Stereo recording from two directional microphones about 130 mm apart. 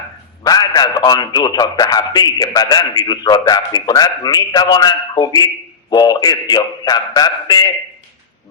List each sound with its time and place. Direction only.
0.4 s a man's voice: 30° left (ahead or behind)